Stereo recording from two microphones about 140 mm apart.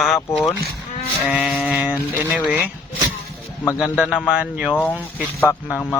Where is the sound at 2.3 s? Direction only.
5° right (ahead or behind).